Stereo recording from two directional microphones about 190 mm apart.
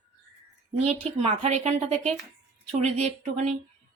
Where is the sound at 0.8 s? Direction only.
35° right (ahead or behind).